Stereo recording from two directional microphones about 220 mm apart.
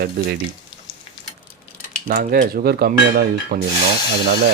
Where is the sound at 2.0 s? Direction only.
35° right (ahead or behind).